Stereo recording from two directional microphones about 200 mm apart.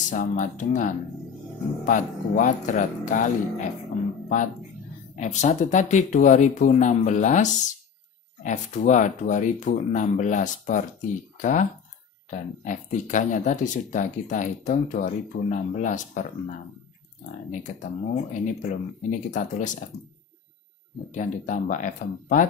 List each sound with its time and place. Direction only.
0.1 s speech: 40° left (ahead or behind)
5.1 s speech: 35° left (ahead or behind)
12.3 s speech: 40° left (ahead or behind)
17.5 s speech: 35° left (ahead or behind)
21.1 s speech: 40° left (ahead or behind)